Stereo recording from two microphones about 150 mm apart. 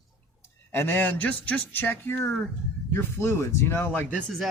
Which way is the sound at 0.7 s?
15° left (ahead or behind).